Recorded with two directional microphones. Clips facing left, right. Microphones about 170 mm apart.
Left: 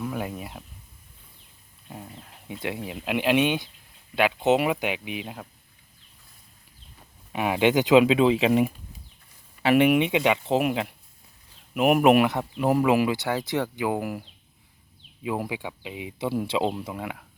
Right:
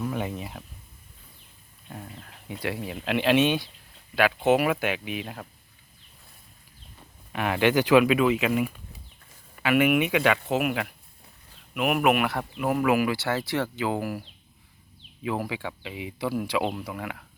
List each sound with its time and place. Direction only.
0.0 s speech: 5° left (ahead or behind)
1.9 s speech: 15° left (ahead or behind)
7.3 s speech: 15° left (ahead or behind)
10.5 s speech: 30° left (ahead or behind)